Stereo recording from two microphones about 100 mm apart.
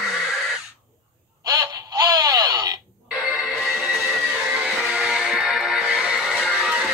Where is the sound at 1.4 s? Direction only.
45° right (ahead or behind).